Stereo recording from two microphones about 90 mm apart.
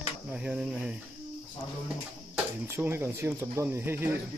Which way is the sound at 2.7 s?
25° right (ahead or behind).